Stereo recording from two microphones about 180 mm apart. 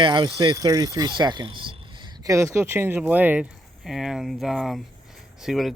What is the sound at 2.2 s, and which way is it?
Speech, 15° right (ahead or behind).